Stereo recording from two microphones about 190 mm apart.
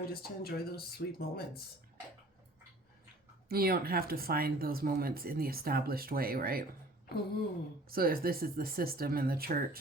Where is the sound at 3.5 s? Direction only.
55° right (ahead or behind).